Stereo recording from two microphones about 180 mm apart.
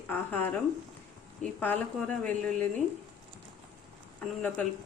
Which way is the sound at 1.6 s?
10° left (ahead or behind).